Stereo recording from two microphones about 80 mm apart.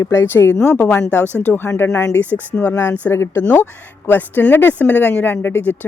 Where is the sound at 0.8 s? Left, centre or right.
Centre.